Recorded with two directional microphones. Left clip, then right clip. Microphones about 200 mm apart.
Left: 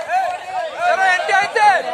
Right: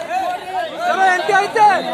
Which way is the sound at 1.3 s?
45° right (ahead or behind).